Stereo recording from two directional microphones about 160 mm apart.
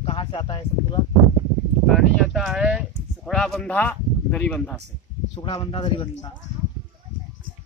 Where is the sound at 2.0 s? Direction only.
Centre (ahead or behind).